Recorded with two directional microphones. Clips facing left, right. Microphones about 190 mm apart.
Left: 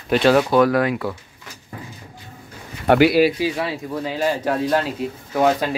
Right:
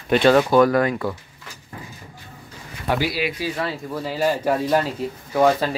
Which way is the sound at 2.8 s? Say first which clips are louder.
Left 9 dB; 65° left (ahead or behind).